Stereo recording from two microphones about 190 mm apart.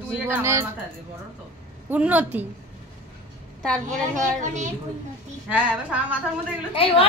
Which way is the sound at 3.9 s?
40° right (ahead or behind).